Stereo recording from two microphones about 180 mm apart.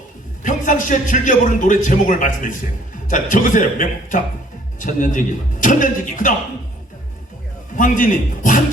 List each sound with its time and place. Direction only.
0.4 s a man's voice: 45° left (ahead or behind)
7.8 s a man's voice: 45° left (ahead or behind)